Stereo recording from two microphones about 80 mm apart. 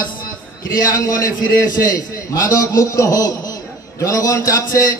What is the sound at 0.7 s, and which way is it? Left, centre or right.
A man's voice, left.